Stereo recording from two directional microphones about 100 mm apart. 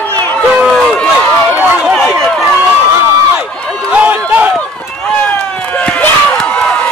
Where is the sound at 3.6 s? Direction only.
5° left (ahead or behind).